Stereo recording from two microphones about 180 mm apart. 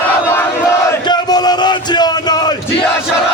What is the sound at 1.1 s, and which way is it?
Music, 20° left (ahead or behind).